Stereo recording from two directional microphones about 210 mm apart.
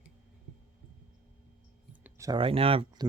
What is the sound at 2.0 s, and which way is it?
Speech, 15° right (ahead or behind).